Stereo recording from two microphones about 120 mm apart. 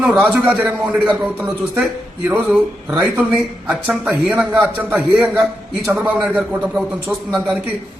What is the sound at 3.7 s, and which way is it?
A man's voice, centre (ahead or behind).